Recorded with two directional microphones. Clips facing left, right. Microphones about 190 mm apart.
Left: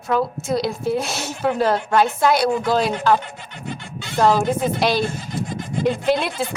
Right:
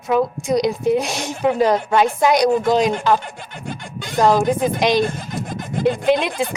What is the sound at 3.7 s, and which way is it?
Speech, 50° right (ahead or behind).